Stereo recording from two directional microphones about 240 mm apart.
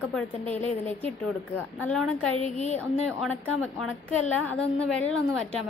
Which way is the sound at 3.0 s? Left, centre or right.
Centre.